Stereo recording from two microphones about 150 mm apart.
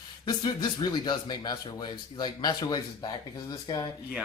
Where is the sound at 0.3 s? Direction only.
30° left (ahead or behind).